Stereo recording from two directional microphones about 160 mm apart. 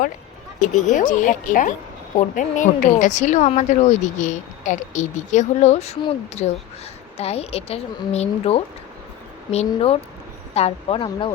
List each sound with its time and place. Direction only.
0.6 s a woman's voice: 50° left (ahead or behind); by 11.3 s 35° left (ahead or behind)